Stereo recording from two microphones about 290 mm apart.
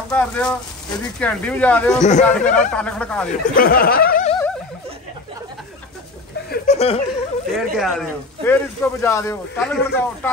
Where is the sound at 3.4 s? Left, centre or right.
Left.